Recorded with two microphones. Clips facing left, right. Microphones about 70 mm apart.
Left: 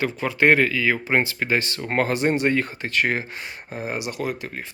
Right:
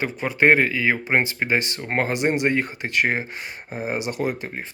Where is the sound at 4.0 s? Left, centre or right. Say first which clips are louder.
Right 2 dB; right.